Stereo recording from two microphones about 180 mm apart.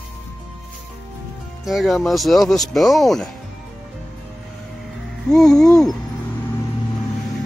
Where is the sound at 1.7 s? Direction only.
Centre (ahead or behind).